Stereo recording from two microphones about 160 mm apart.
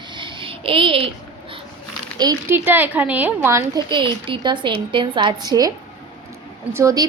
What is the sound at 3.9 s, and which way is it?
A woman's voice, 30° right (ahead or behind).